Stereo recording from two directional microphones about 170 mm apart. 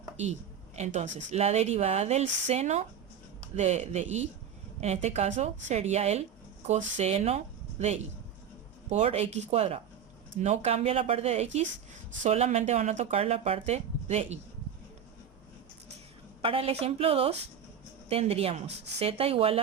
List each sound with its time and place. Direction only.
0.8 s speech: 45° right (ahead or behind)
16.4 s speech: 35° right (ahead or behind)